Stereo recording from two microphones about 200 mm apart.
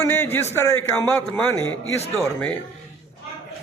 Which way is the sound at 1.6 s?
80° left.